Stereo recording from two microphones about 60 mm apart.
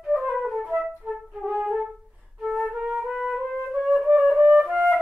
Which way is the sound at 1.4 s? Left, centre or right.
Centre.